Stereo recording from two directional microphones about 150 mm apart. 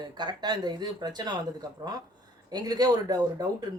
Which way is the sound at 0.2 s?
30° right (ahead or behind).